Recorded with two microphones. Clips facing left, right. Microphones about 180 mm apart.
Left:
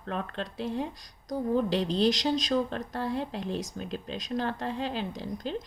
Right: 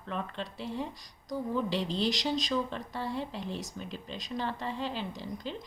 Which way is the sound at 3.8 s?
75° left (ahead or behind).